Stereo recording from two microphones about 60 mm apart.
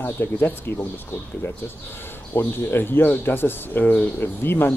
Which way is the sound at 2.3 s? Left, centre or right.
Left.